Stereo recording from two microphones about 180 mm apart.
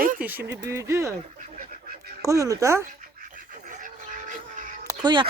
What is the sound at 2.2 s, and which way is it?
Speech, 20° right (ahead or behind).